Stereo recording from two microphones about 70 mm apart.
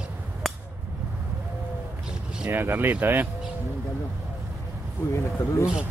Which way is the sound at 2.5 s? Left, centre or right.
Right.